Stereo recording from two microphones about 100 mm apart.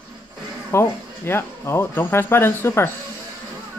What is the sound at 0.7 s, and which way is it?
Speech, 25° left (ahead or behind).